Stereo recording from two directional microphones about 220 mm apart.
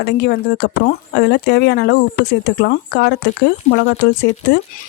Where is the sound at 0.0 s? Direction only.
50° left (ahead or behind).